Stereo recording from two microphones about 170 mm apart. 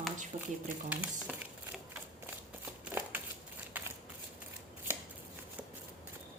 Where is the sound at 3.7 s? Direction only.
10° right (ahead or behind).